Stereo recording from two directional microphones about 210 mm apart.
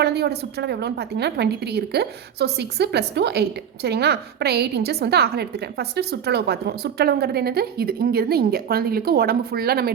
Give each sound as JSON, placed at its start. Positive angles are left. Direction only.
{"t": 0.0, "sound": "a woman's voice", "side_deg": -50}